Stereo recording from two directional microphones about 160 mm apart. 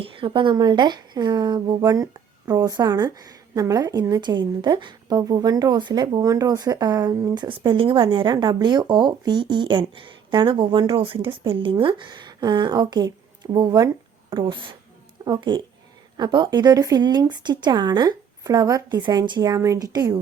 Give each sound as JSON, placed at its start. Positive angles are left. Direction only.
{"t": 0.0, "sound": "speech", "side_deg": -35}